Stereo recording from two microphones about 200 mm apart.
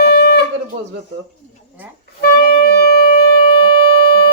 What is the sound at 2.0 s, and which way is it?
Wind instrument, 50° left (ahead or behind).